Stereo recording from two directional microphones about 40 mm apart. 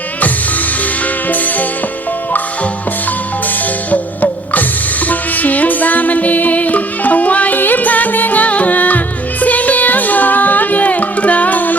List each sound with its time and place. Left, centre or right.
1.3 s music: left
3.9 s music: left